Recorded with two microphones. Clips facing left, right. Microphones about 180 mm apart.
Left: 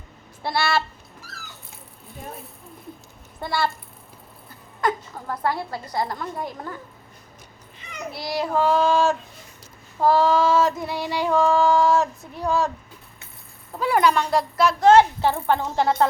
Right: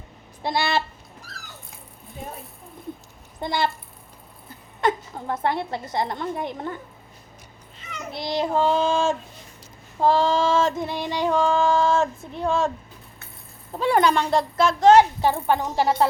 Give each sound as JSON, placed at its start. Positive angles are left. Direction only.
{"t": 0.4, "sound": "a sound", "side_deg": -15}
{"t": 3.4, "sound": "female singing", "side_deg": -20}
{"t": 4.8, "sound": "female singing", "side_deg": -25}
{"t": 8.1, "sound": "female singing", "side_deg": -20}
{"t": 13.7, "sound": "female singing", "side_deg": -25}